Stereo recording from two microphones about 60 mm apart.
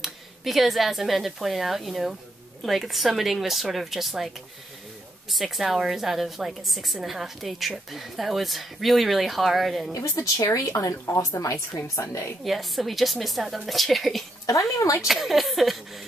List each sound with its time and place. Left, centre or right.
0.0 s a woman's voice: centre
5.3 s a woman's voice: centre
9.9 s a woman's voice: left
12.4 s a woman's voice: centre
14.4 s a woman's voice: left
15.0 s a woman's voice: centre